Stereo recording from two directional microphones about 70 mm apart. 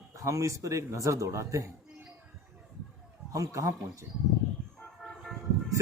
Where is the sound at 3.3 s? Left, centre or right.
Right.